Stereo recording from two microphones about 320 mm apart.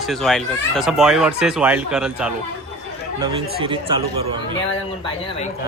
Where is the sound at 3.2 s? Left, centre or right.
Centre.